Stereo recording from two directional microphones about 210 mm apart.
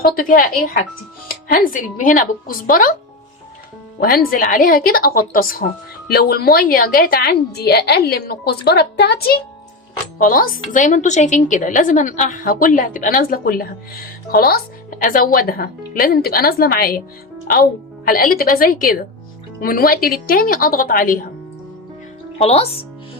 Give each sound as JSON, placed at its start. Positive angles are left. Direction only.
{"t": 0.0, "sound": "speech", "side_deg": 40}
{"t": 4.0, "sound": "a woman's voice", "side_deg": 45}
{"t": 18.1, "sound": "a woman's voice", "side_deg": 45}
{"t": 22.4, "sound": "speech", "side_deg": 30}